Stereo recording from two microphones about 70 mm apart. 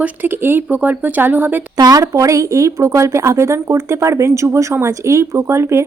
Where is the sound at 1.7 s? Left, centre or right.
Right.